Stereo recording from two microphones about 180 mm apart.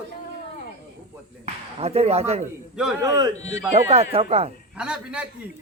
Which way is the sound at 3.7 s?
35° right (ahead or behind).